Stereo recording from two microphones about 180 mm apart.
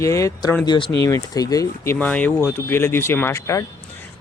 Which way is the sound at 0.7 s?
25° left (ahead or behind).